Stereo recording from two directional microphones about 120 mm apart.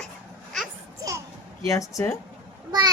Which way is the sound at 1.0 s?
25° right (ahead or behind).